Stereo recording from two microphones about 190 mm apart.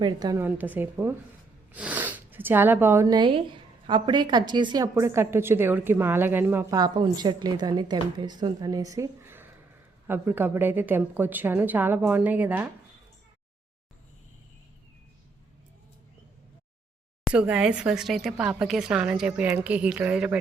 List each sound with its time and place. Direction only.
0.0 s a woman's voice: 20° right (ahead or behind)
0.4 s speech: 10° right (ahead or behind)
17.2 s speech: 5° right (ahead or behind)